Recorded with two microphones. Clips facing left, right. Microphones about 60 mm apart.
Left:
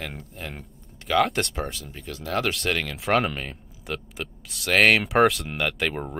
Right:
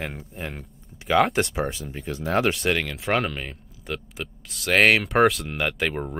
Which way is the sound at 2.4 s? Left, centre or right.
Centre.